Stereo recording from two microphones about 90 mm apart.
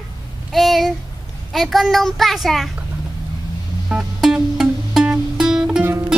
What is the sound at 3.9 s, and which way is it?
Music, 10° right (ahead or behind).